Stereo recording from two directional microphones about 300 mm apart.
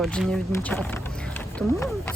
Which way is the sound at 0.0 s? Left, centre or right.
Centre.